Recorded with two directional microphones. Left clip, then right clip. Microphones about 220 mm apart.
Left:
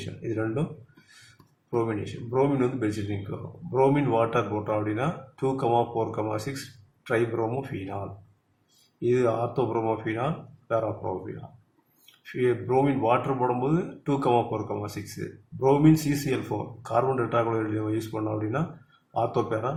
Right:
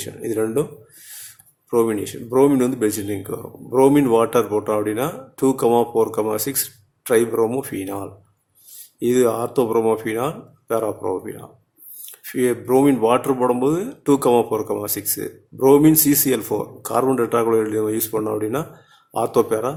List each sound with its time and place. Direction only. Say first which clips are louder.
0.0 s speech: right 8 dB; 55° right (ahead or behind)
1.7 s speech: right 9 dB; 55° right (ahead or behind)
9.0 s speech: right 6 dB; 50° right (ahead or behind)
12.2 s speech: right 5 dB; 55° right (ahead or behind)